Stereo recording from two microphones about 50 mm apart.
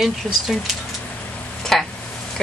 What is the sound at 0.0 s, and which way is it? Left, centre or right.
Speech, centre.